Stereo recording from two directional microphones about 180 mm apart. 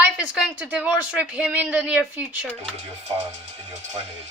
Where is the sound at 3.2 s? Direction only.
40° right (ahead or behind).